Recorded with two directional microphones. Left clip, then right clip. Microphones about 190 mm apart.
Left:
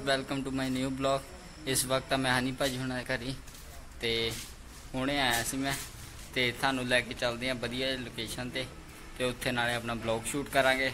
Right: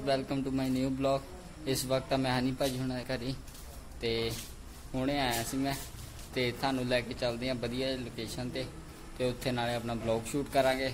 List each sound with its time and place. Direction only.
0.0 s a man's voice: 5° right (ahead or behind)